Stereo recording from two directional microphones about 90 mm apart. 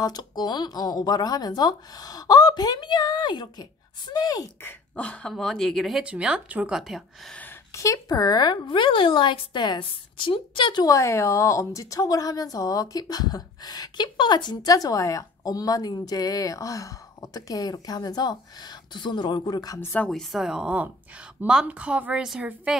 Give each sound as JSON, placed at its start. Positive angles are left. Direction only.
{"t": 0.0, "sound": "a woman's voice", "side_deg": 50}
{"t": 4.6, "sound": "speech", "side_deg": 15}
{"t": 6.0, "sound": "a woman's voice", "side_deg": -10}
{"t": 6.8, "sound": "speech", "side_deg": 0}
{"t": 7.7, "sound": "speech", "side_deg": 40}
{"t": 10.8, "sound": "a woman's voice", "side_deg": 35}
{"t": 19.4, "sound": "a woman's voice", "side_deg": 45}
{"t": 19.8, "sound": "speech", "side_deg": 20}
{"t": 20.1, "sound": "a woman's voice", "side_deg": 0}